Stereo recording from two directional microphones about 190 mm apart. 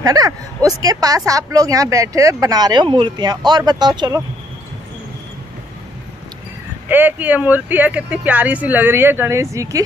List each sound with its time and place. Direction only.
0.0 s speech: 20° right (ahead or behind)
6.9 s speech: 10° right (ahead or behind)